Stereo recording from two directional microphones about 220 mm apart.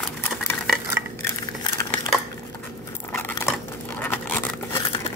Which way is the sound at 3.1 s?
10° left (ahead or behind).